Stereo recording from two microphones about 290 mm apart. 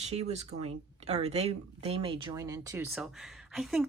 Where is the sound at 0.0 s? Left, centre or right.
Right.